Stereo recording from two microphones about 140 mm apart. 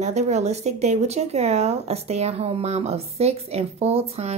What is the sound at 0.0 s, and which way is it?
Speech, 55° right (ahead or behind).